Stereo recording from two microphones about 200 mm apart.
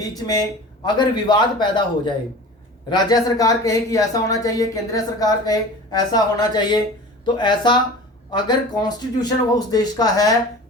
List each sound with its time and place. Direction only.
0.9 s speech: 20° left (ahead or behind)